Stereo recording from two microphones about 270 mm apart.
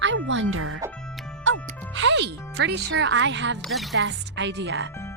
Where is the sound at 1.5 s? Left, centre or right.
Right.